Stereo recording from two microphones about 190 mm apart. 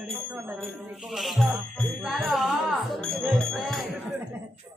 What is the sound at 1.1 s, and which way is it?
Speech, centre (ahead or behind).